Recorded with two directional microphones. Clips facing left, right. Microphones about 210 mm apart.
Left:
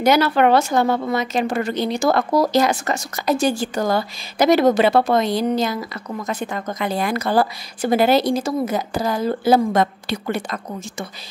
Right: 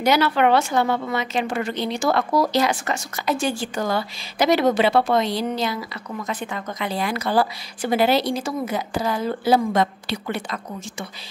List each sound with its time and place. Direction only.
0.0 s a woman's voice: 45° left (ahead or behind)